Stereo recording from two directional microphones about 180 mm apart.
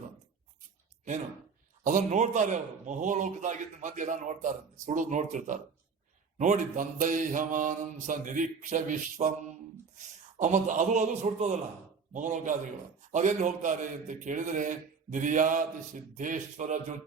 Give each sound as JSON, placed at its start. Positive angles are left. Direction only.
{"t": 1.8, "sound": "mantra", "side_deg": -45}
{"t": 10.3, "sound": "a man's voice", "side_deg": -45}
{"t": 12.1, "sound": "mantra", "side_deg": -45}